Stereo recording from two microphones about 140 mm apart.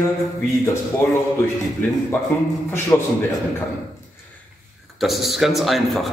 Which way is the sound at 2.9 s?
15° left (ahead or behind).